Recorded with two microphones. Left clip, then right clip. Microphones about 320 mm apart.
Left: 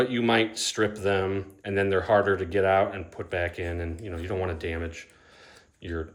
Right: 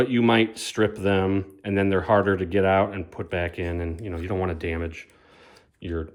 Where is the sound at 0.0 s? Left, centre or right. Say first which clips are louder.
Right 3 dB; centre.